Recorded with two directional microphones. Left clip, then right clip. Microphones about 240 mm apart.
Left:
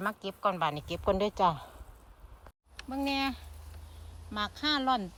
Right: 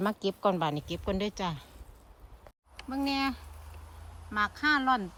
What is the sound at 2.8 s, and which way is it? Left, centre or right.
Speech, right.